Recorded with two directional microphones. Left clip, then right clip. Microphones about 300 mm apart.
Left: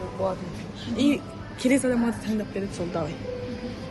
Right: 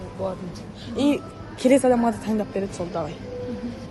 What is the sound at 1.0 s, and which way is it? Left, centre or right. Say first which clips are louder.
A woman's voice: right 2 dB; centre.